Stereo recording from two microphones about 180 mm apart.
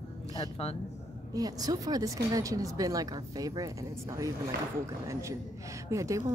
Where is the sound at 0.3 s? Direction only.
30° left (ahead or behind).